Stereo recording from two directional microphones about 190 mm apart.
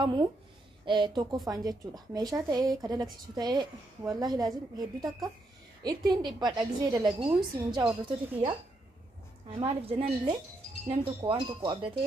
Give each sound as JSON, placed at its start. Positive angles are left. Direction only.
{"t": 0.0, "sound": "speech", "side_deg": -25}
{"t": 9.6, "sound": "speech", "side_deg": -30}